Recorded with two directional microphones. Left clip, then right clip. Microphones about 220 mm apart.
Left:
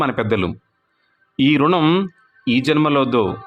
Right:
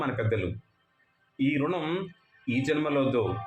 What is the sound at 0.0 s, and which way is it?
A man's voice, 40° left (ahead or behind).